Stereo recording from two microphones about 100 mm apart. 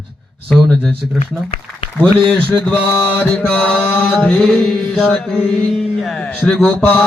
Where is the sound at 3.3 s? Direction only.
10° left (ahead or behind).